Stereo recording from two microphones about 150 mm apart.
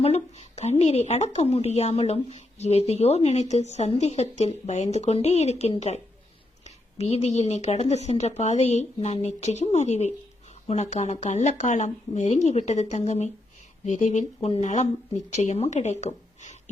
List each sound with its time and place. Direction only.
0.0 s a woman's voice: 45° left (ahead or behind)